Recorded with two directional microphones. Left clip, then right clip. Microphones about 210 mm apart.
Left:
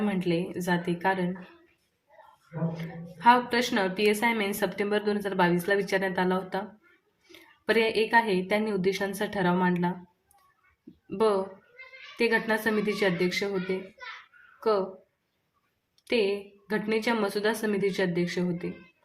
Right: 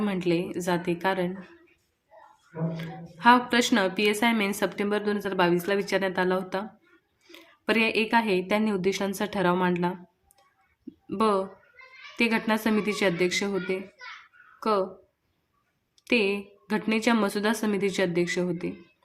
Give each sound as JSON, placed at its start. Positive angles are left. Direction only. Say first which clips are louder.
{"t": 0.0, "sound": "a woman's voice", "louder": "right 2 dB", "side_deg": -20}
{"t": 2.7, "sound": "a woman's voice", "louder": "right 2 dB", "side_deg": -20}
{"t": 11.1, "sound": "a woman's voice", "louder": "right 1 dB", "side_deg": -25}
{"t": 16.0, "sound": "a woman's voice", "louder": "right 2 dB", "side_deg": -25}